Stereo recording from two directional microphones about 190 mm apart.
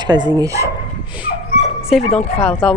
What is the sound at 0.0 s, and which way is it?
Speech, 20° right (ahead or behind).